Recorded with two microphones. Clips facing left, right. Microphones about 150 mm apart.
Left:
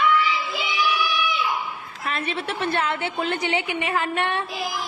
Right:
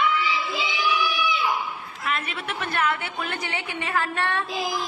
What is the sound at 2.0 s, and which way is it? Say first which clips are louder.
A woman's voice: left 2 dB; 35° left (ahead or behind).